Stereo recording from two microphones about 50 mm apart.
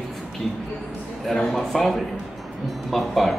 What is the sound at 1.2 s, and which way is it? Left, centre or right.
Speech, centre.